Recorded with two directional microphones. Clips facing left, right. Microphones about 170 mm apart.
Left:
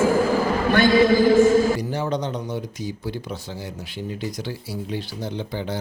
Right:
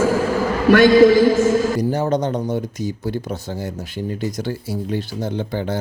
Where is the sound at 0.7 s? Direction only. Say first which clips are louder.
Right 6 dB; 90° right.